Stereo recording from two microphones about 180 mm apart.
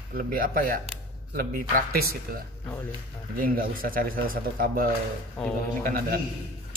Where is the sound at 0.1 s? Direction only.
55° right (ahead or behind).